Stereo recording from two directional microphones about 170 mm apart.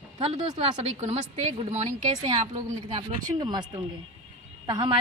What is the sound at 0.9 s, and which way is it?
Speech, 40° right (ahead or behind).